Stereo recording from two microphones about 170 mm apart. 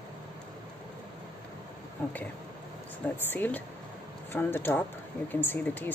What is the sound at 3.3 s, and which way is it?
Speech, 10° left (ahead or behind).